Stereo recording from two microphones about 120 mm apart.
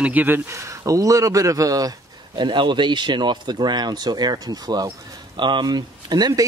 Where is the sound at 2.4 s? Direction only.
40° right (ahead or behind).